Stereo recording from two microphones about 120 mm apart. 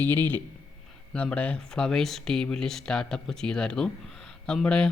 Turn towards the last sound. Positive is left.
turn(degrees=5)  # may be behind; listen again after turning